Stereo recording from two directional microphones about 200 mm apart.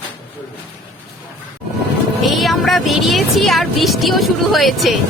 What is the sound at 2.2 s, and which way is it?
Speech, centre (ahead or behind).